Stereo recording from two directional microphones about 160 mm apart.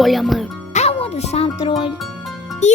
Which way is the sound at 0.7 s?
40° left (ahead or behind).